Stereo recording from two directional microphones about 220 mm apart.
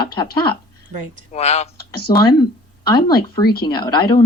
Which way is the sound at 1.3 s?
30° left (ahead or behind).